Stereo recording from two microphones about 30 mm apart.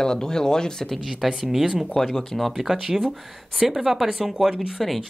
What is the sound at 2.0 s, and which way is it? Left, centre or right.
Speech, centre.